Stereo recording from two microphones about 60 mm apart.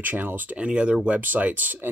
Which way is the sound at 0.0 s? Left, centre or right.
Right.